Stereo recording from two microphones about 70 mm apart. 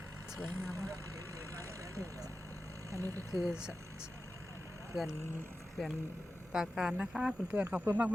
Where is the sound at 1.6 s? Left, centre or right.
Right.